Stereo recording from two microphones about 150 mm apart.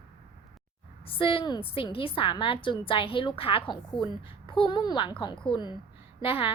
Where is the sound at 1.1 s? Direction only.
35° left (ahead or behind).